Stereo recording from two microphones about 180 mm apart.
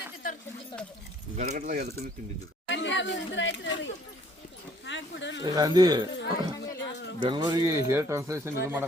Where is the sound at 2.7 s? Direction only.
90° left.